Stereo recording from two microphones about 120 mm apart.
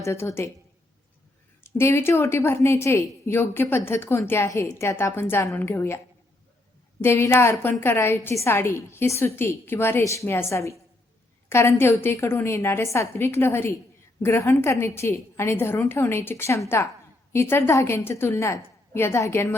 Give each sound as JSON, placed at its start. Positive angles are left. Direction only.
{"t": 0.0, "sound": "a woman's voice", "side_deg": 25}
{"t": 1.6, "sound": "a woman's voice", "side_deg": 20}
{"t": 7.0, "sound": "a woman's voice", "side_deg": 20}